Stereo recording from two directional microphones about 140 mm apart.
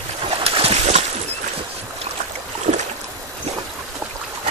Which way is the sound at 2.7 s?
55° right (ahead or behind).